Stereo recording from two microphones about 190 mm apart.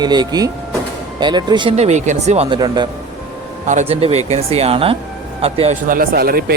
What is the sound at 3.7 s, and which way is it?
Speech, 35° right (ahead or behind).